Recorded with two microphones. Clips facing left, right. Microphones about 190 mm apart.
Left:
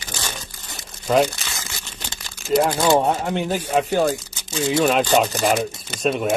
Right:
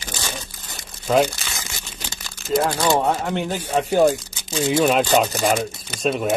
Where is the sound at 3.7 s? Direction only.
Centre (ahead or behind).